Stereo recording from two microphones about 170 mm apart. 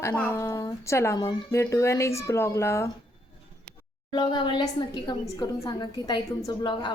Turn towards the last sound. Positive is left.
turn(degrees=25)  # may be behind; listen again after turning